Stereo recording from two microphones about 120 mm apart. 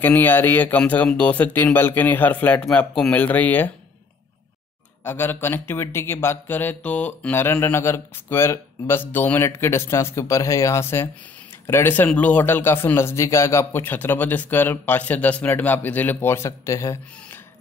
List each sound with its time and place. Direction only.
0.0 s speech: 15° left (ahead or behind)
5.0 s speech: 20° left (ahead or behind)